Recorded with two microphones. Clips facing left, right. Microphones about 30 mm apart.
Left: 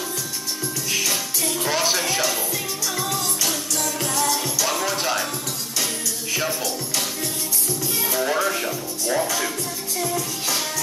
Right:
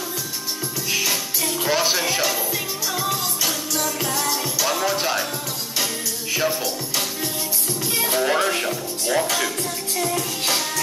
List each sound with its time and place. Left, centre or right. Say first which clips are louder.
0.9 s music: right 1 dB; centre
6.3 s music: right 3 dB; centre
8.2 s speech: right 1 dB; right